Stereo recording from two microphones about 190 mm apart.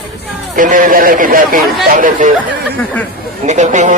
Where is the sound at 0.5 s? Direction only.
45° right (ahead or behind).